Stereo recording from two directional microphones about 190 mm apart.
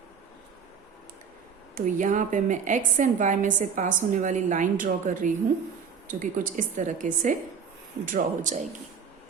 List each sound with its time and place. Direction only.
1.7 s a woman's voice: 40° right (ahead or behind)